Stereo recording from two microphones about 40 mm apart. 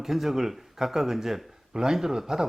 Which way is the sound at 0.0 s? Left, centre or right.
Centre.